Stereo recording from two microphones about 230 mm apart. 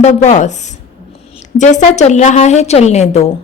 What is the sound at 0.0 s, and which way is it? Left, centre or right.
A woman's voice, left.